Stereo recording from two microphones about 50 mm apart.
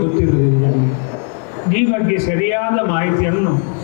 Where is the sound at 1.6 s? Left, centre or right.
Left.